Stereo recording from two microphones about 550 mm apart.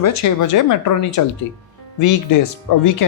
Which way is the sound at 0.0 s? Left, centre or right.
Left.